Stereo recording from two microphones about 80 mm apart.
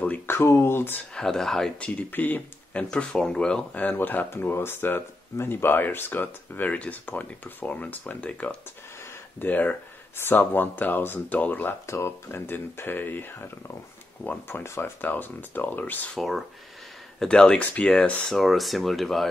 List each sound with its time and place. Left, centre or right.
0.0 s a sound: left
0.4 s speech: left
1.1 s speech: centre
1.8 s speech: left
3.8 s speech: left
11.8 s speech: left
16.2 s speech: centre
17.2 s speech: centre
18.3 s speech: centre